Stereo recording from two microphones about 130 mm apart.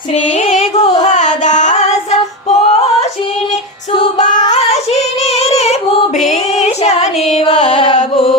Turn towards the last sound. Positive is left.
turn(degrees=40)  # may be behind; listen again after turning